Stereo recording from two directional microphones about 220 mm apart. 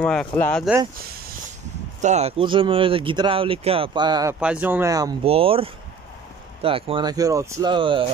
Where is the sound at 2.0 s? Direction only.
30° right (ahead or behind).